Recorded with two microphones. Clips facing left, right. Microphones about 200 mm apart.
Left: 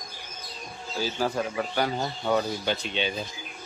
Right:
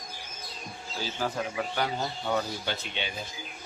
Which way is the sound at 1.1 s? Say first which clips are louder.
Left 2 dB; 40° left (ahead or behind).